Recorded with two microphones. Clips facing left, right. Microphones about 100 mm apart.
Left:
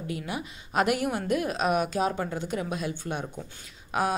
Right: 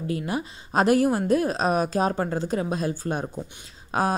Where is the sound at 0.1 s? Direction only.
35° right (ahead or behind).